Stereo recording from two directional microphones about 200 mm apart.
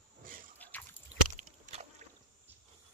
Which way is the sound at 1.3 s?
35° right (ahead or behind).